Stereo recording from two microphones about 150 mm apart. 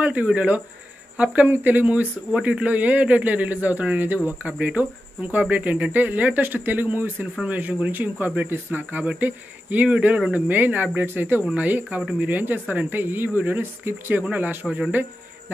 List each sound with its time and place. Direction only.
0.0 s speech: 10° right (ahead or behind)